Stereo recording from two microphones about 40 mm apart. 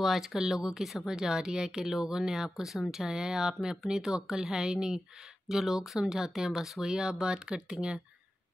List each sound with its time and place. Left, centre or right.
0.0 s speech: centre; by 8.0 s right